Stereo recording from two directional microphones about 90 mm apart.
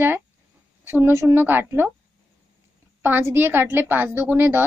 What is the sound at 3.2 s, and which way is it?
Speech, 25° right (ahead or behind).